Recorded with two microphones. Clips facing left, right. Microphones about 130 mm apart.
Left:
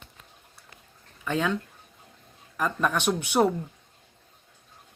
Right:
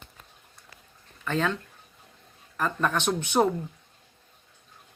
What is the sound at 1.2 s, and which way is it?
Speech, 10° left (ahead or behind).